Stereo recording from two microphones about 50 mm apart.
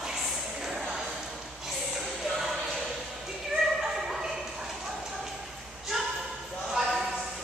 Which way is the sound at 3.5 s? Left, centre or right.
Centre.